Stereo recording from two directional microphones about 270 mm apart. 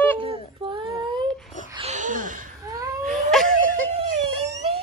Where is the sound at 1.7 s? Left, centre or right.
Right.